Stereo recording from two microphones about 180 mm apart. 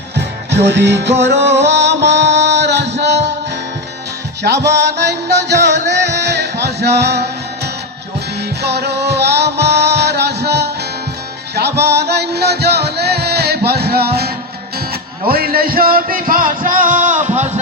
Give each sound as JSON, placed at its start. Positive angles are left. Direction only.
{"t": 0.5, "sound": "music", "side_deg": -75}
{"t": 4.4, "sound": "music", "side_deg": -70}
{"t": 11.9, "sound": "music", "side_deg": -65}